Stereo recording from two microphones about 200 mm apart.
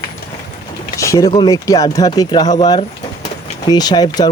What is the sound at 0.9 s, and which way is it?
Speech, 15° left (ahead or behind).